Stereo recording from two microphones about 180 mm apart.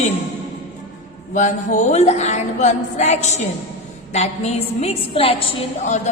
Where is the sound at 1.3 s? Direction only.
45° left (ahead or behind).